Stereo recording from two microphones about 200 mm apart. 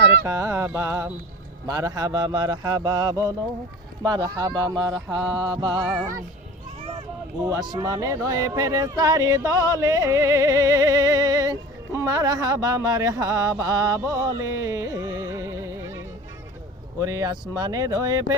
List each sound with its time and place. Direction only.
0.3 s music: 15° right (ahead or behind)
1.6 s speech: 20° right (ahead or behind)
5.8 s music: 5° right (ahead or behind)
7.4 s music: 20° right (ahead or behind)